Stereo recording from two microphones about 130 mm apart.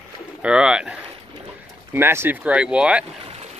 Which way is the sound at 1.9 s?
20° right (ahead or behind).